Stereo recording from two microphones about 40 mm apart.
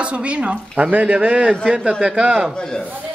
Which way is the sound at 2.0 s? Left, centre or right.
Right.